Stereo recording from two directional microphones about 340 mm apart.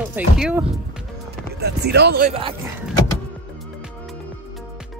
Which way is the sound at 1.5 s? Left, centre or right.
Right.